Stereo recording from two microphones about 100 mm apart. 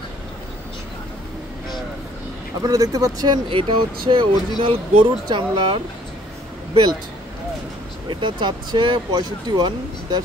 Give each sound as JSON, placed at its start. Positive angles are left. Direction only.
{"t": 2.6, "sound": "speech", "side_deg": -35}
{"t": 3.4, "sound": "speech", "side_deg": -60}
{"t": 8.1, "sound": "speech", "side_deg": -55}